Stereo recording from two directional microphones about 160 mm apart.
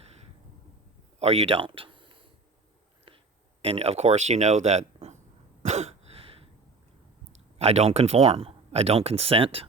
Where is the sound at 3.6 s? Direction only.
40° right (ahead or behind).